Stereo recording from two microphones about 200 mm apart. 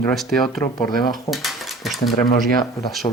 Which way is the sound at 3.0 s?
25° left (ahead or behind).